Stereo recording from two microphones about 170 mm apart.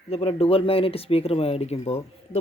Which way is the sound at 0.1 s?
35° left (ahead or behind).